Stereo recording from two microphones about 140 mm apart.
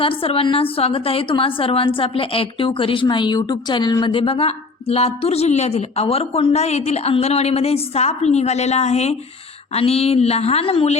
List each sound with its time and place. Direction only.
0.0 s a woman's voice: 40° left (ahead or behind)